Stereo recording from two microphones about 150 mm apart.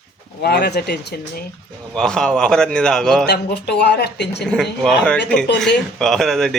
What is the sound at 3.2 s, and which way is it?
Speech, 90° left.